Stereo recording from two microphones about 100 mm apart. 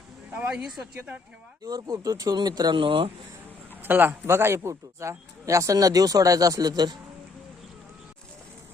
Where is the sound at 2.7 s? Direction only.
60° right (ahead or behind).